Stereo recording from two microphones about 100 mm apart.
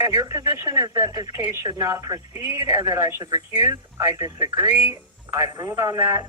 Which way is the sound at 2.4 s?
90° left.